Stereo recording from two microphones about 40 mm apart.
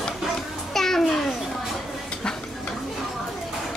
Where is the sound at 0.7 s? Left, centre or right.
Centre.